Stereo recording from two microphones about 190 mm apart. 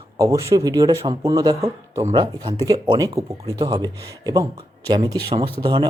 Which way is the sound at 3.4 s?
30° right (ahead or behind).